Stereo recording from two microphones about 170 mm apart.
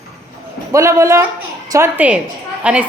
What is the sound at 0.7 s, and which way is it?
A woman's voice, 15° right (ahead or behind).